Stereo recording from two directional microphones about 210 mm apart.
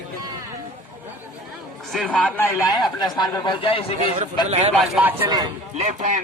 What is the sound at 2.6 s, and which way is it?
Speech, 20° left (ahead or behind).